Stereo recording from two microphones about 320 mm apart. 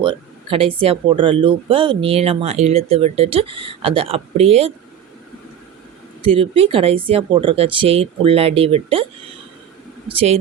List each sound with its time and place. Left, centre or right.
0.0 s speech: centre
6.2 s speech: centre
10.1 s speech: centre